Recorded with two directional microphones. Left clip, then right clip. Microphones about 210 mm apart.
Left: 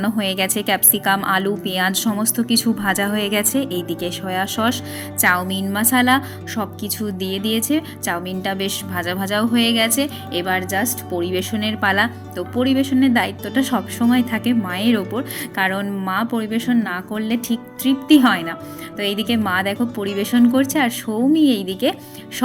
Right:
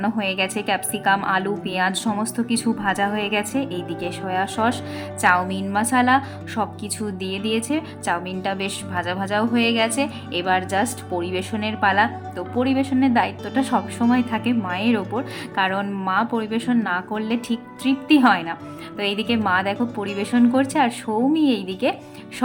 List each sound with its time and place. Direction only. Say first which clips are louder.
0.0 s a woman's voice: left 2 dB; 10° left (ahead or behind)